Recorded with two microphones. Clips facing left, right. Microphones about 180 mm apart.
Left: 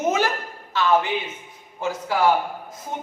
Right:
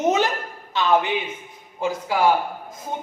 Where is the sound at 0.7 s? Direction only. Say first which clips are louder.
Even; 20° right (ahead or behind).